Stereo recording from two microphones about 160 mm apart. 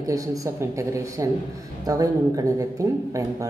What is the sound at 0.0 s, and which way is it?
A woman's voice, 20° right (ahead or behind).